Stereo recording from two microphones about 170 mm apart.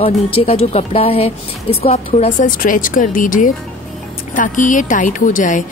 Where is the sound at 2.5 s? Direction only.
55° left (ahead or behind).